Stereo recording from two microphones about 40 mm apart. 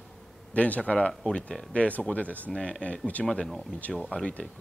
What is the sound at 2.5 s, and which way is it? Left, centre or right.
Speech, centre.